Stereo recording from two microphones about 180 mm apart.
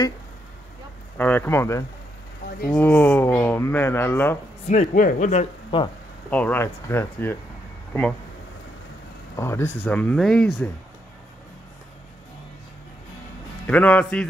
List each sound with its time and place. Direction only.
1.1 s a man's voice: 10° left (ahead or behind)
4.6 s speech: 45° left (ahead or behind)
5.7 s speech: 30° left (ahead or behind)
6.3 s speech: 10° left (ahead or behind)
9.4 s speech: 15° left (ahead or behind)
13.7 s speech: 10° left (ahead or behind)